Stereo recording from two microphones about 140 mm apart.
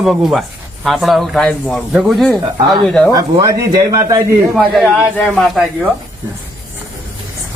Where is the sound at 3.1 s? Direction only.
25° right (ahead or behind).